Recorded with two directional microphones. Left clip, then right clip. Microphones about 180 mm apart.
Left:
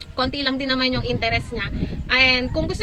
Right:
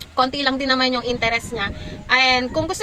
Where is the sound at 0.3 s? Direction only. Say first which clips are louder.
Right 3 dB; 15° left (ahead or behind).